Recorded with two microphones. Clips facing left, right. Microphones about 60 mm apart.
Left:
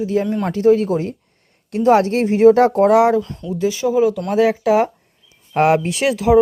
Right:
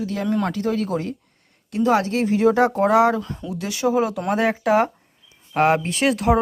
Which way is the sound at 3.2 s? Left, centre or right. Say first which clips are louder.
Left 3 dB; centre.